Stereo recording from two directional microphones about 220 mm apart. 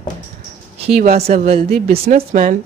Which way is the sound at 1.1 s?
30° right (ahead or behind).